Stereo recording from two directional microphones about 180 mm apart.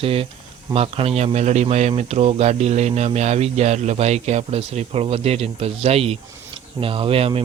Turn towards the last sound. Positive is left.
turn(degrees=-30)  # may be behind; listen again after turning